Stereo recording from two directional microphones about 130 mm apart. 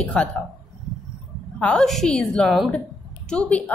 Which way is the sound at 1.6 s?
5° left (ahead or behind).